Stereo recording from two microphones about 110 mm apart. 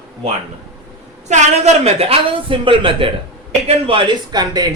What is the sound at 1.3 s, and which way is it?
A man's voice, 90° right.